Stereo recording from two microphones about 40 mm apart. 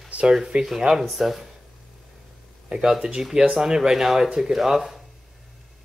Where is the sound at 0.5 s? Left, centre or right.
Right.